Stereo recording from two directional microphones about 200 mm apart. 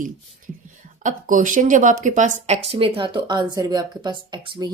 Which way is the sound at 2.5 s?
30° right (ahead or behind).